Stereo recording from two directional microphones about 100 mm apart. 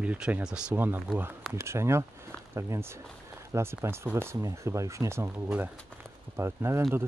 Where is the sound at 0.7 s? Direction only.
20° right (ahead or behind).